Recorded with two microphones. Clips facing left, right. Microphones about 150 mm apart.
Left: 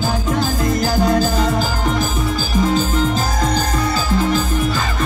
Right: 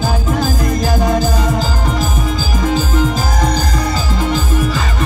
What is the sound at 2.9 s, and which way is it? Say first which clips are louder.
Music: right 2 dB; 15° right (ahead or behind).